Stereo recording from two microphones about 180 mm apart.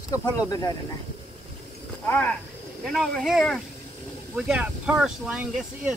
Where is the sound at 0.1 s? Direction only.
20° left (ahead or behind).